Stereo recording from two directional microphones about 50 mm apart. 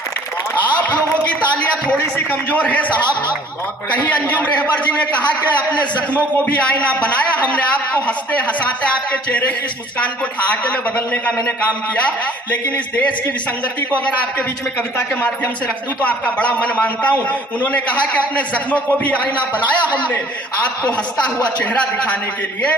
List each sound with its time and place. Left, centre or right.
2.1 s a man's voice: left
4.4 s a man's voice: left
6.3 s a man's voice: left
10.5 s a man's voice: left
12.5 s a man's voice: left
16.0 s a man's voice: left
21.7 s a man's voice: left